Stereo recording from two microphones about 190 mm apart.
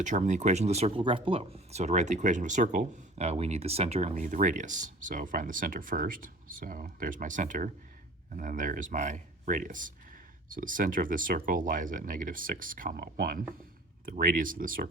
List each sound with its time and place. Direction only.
0.0 s speech: 40° right (ahead or behind)